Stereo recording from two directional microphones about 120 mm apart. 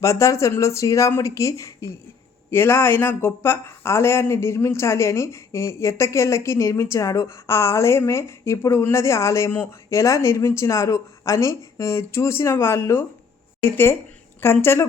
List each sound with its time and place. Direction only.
0.0 s speech: 25° left (ahead or behind)